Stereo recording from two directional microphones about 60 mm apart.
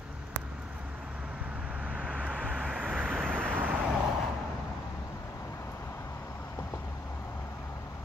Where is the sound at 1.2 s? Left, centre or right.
Centre.